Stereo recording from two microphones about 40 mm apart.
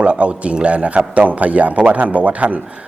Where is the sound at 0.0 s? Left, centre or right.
Right.